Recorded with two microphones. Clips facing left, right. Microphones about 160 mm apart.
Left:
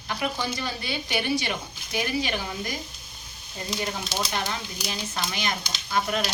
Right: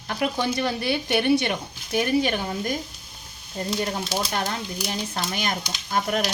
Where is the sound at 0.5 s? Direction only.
65° right (ahead or behind).